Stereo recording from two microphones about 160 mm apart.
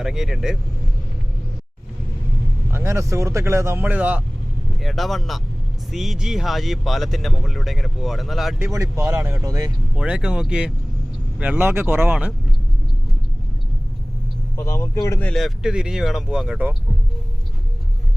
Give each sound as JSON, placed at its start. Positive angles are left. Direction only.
{"t": 0.0, "sound": "speech", "side_deg": -5}
{"t": 2.6, "sound": "speech", "side_deg": -15}
{"t": 8.5, "sound": "speech", "side_deg": -15}
{"t": 9.9, "sound": "speech", "side_deg": -5}
{"t": 14.5, "sound": "speech", "side_deg": 15}
{"t": 15.1, "sound": "speech", "side_deg": 5}